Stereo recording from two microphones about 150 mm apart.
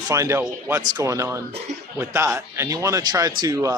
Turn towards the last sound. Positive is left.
turn(degrees=-20)  # may be behind; listen again after turning